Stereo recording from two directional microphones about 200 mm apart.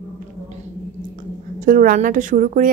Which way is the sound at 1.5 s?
40° right (ahead or behind).